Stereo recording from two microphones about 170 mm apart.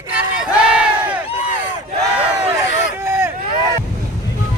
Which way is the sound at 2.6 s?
15° right (ahead or behind).